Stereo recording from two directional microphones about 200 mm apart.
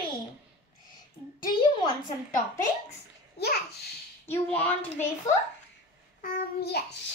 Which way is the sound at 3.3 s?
50° left (ahead or behind).